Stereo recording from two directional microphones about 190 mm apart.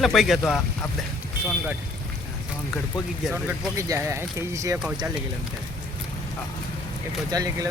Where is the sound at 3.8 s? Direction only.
15° right (ahead or behind).